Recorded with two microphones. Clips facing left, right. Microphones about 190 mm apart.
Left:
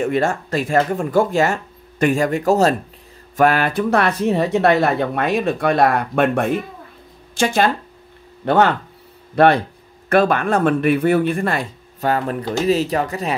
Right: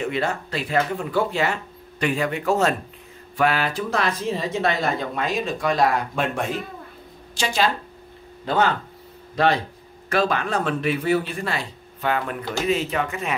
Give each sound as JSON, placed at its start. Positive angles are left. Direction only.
{"t": 0.0, "sound": "speech", "side_deg": 50}
{"t": 8.5, "sound": "speech", "side_deg": 65}